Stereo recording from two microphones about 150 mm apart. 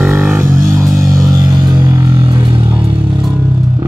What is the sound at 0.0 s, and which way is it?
Music, 15° right (ahead or behind).